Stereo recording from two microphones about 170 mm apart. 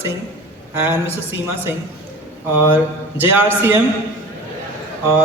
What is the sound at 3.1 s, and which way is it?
Speech, 10° right (ahead or behind).